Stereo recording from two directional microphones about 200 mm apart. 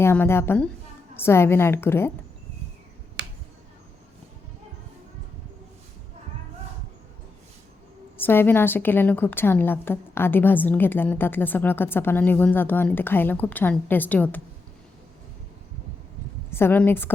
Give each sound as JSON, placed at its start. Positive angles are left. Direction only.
{"t": 0.0, "sound": "a woman's voice", "side_deg": 10}
{"t": 3.2, "sound": "finger snapping", "side_deg": -60}
{"t": 8.2, "sound": "a woman's voice", "side_deg": 10}
{"t": 16.5, "sound": "a woman's voice", "side_deg": 10}